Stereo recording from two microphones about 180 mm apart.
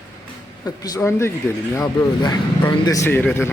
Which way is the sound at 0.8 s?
20° left (ahead or behind).